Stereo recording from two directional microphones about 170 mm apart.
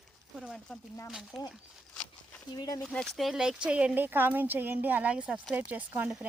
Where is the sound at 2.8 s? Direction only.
5° left (ahead or behind).